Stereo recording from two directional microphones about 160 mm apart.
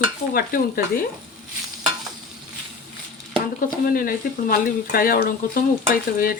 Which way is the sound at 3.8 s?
65° left (ahead or behind).